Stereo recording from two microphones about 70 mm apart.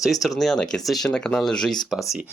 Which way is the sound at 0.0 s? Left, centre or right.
Centre.